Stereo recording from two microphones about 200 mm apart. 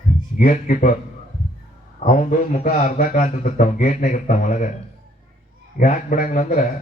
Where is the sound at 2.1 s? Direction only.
35° left (ahead or behind).